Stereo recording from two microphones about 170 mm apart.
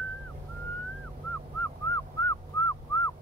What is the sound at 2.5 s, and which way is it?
Whistling, 20° left (ahead or behind).